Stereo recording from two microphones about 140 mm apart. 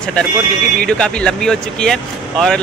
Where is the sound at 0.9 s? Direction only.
5° left (ahead or behind).